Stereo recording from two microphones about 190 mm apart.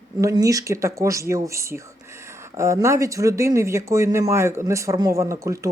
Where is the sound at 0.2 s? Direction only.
15° right (ahead or behind).